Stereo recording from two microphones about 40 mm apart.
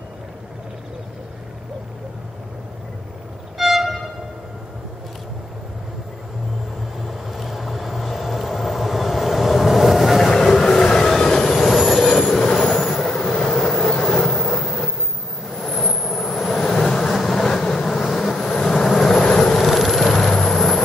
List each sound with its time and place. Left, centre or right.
3.5 s violin: centre
7.1 s vehicle: centre
10.3 s vehicle: centre
10.8 s train: centre
11.9 s vehicle: centre
12.3 s train: centre
12.7 s vehicle: centre
18.0 s vehicle: centre
18.3 s vehicle: centre
19.5 s vehicle: centre